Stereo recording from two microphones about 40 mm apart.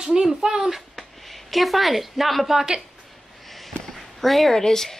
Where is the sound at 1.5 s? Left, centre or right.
Centre.